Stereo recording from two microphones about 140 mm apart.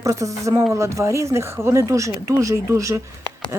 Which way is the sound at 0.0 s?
25° right (ahead or behind).